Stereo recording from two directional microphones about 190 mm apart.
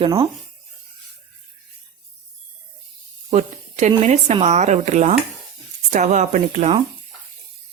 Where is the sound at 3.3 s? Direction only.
35° right (ahead or behind).